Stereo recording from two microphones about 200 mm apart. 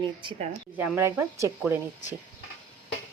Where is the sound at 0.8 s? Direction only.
10° right (ahead or behind).